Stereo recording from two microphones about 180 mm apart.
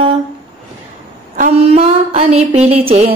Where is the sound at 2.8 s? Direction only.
35° right (ahead or behind).